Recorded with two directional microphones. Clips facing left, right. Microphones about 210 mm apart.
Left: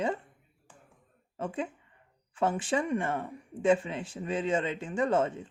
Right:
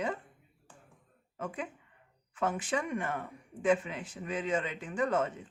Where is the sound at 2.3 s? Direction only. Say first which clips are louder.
Left 4 dB; 30° left (ahead or behind).